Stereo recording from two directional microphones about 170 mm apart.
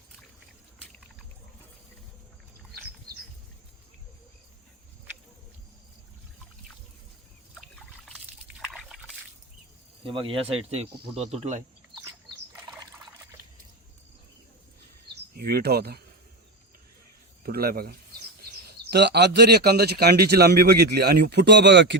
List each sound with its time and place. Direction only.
8.0 s liquid: centre (ahead or behind)
10.0 s speech: 30° right (ahead or behind)
15.4 s speech: 65° right (ahead or behind)
17.4 s speech: 65° right (ahead or behind)
18.9 s speech: 80° right